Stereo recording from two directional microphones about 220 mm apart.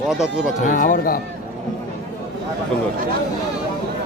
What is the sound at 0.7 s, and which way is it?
Speech, 40° left (ahead or behind).